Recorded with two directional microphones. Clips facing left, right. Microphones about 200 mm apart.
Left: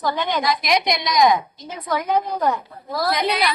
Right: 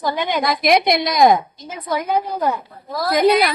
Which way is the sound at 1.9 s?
10° right (ahead or behind).